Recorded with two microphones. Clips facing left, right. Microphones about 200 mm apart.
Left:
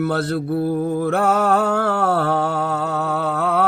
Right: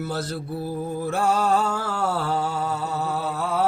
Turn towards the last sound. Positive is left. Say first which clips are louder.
# left 5 dB
turn(degrees=60)  # may be behind; listen again after turning